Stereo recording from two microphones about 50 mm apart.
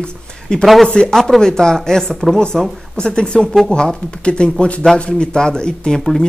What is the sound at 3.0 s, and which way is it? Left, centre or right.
Speech, centre.